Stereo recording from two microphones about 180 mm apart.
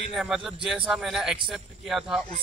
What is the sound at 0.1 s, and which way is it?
Speech, centre (ahead or behind).